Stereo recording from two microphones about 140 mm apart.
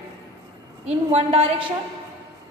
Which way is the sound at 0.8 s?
45° right (ahead or behind).